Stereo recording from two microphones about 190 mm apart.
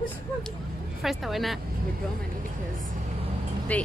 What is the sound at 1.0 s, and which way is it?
Speech, centre (ahead or behind).